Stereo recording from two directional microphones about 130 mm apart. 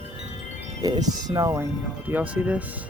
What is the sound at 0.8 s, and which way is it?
Speech, 30° right (ahead or behind).